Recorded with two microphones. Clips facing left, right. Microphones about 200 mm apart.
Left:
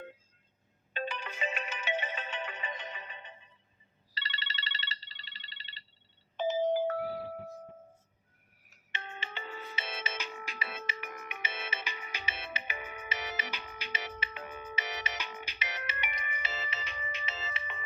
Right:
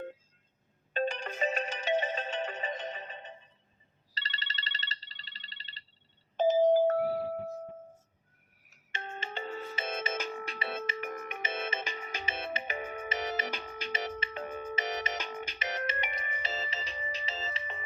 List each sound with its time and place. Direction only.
0.9 s ringtone: 45° right (ahead or behind)
8.9 s ringtone: 45° right (ahead or behind)
10.4 s music: 30° right (ahead or behind)
10.8 s music: 50° right (ahead or behind)
16.1 s music: 35° right (ahead or behind)